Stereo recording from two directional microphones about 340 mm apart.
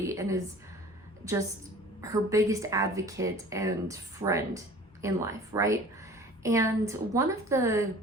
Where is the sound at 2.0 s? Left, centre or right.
Centre.